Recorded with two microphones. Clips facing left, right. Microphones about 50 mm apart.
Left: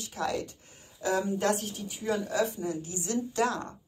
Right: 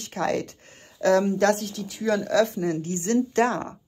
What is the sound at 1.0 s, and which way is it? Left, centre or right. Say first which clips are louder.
Speech: right 9 dB; right.